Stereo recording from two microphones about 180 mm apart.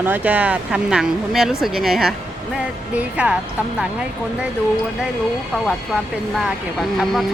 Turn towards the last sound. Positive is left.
turn(degrees=0)  # may be behind; listen again after turning